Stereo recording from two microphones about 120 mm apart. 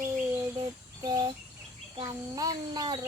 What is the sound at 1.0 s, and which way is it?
A child's voice, 35° right (ahead or behind).